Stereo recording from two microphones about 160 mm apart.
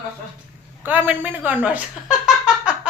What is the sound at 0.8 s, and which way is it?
A woman's voice, 10° right (ahead or behind).